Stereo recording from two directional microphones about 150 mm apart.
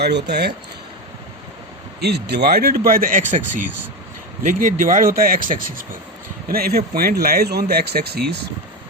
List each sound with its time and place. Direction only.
0.0 s speech: 90° right
2.0 s speech: 90° right; by 6.0 s 65° right (ahead or behind)
6.5 s speech: 90° right